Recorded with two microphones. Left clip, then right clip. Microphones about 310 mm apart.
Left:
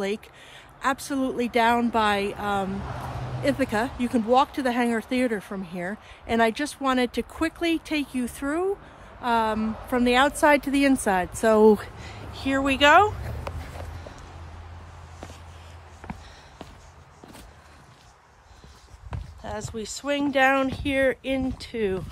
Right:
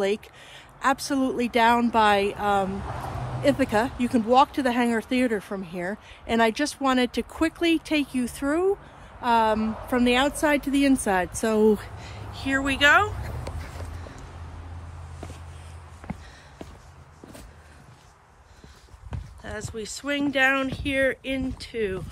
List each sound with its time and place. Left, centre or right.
0.0 s speech: centre
10.4 s speech: centre
11.0 s speech: centre
11.7 s speech: left; by 13.1 s centre
19.0 s speech: centre